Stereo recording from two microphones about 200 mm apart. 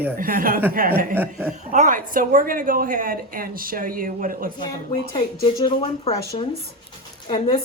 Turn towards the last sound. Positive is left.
turn(degrees=30)  # may be behind; listen again after turning